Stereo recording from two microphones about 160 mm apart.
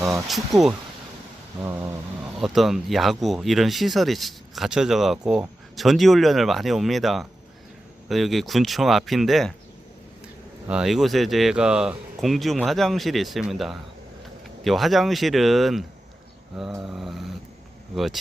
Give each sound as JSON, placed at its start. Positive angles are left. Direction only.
{"t": 0.0, "sound": "speech", "side_deg": 0}
{"t": 1.6, "sound": "a sound", "side_deg": -15}
{"t": 2.4, "sound": "speech", "side_deg": 0}
{"t": 10.7, "sound": "speech", "side_deg": -5}
{"t": 16.8, "sound": "speech", "side_deg": 0}